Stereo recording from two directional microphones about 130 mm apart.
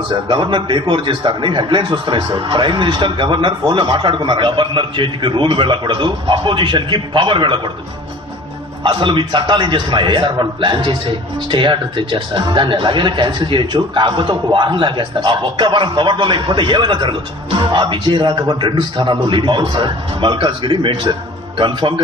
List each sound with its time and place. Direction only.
0.1 s a man's voice: 35° right (ahead or behind)
8.8 s a man's voice: 40° right (ahead or behind)